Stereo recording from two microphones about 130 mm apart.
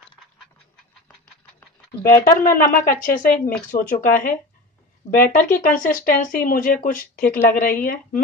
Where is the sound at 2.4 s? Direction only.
90° left.